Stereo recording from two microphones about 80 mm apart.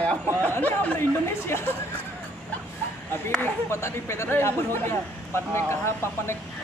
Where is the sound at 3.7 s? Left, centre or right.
Left.